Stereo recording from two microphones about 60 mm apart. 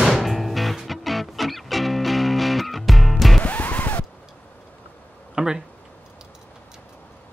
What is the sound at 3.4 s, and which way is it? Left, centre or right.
Music, left.